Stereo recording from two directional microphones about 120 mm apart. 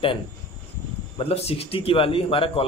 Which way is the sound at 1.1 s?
55° left (ahead or behind).